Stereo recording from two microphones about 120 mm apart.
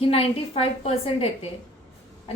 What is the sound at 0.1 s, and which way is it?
A woman's voice, 50° left (ahead or behind).